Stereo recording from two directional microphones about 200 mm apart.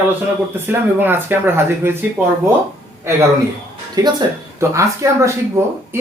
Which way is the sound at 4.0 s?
20° right (ahead or behind).